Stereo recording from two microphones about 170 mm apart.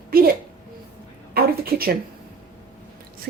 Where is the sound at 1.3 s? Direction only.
60° right (ahead or behind).